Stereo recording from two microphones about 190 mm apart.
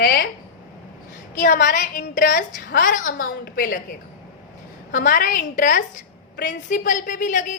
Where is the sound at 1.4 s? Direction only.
45° left (ahead or behind).